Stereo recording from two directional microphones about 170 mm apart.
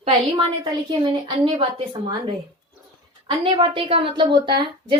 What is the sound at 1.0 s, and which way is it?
Speech, 30° right (ahead or behind).